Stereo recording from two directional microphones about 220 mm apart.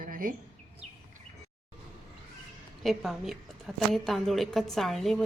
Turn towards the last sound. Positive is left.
turn(degrees=0)  # may be behind; listen again after turning